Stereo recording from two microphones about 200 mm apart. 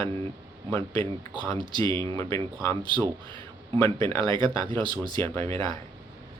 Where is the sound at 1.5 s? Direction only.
25° right (ahead or behind).